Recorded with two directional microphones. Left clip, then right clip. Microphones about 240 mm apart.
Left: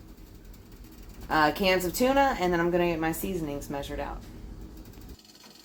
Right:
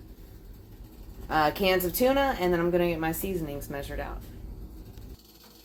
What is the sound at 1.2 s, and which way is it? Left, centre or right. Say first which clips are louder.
Speech: left 1 dB; centre.